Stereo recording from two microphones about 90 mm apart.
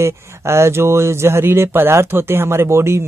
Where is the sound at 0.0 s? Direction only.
30° right (ahead or behind).